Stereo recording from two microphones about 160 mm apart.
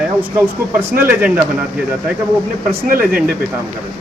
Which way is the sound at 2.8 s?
65° right (ahead or behind).